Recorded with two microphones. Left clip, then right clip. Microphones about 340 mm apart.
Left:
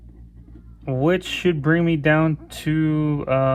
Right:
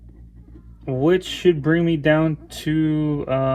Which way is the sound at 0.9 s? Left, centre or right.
Centre.